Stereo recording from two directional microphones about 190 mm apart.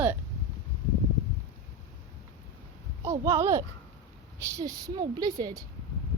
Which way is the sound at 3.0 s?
15° right (ahead or behind).